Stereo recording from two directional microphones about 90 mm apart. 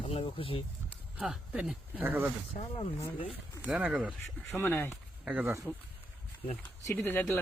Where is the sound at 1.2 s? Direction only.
5° right (ahead or behind).